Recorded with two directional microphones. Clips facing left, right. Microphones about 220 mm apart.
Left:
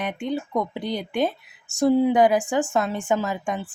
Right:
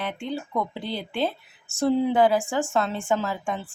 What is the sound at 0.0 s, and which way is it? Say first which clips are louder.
Speech: left 3 dB; 15° left (ahead or behind).